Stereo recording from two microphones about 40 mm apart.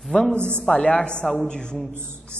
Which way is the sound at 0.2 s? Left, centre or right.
Left.